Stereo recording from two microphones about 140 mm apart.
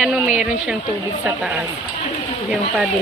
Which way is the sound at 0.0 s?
5° right (ahead or behind).